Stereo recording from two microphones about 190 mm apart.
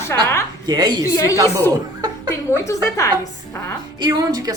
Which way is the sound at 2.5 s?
15° left (ahead or behind).